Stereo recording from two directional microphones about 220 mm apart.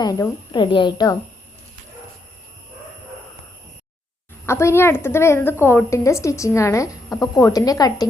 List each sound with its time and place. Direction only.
0.0 s a woman's voice: 15° left (ahead or behind)
4.4 s a woman's voice: 10° left (ahead or behind)